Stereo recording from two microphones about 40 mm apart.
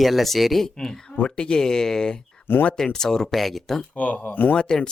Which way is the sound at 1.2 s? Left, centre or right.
Left.